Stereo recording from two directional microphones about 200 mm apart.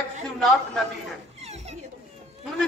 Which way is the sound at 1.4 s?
30° right (ahead or behind).